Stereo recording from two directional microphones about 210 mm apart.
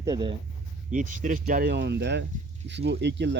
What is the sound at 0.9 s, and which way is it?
Speech, 40° right (ahead or behind).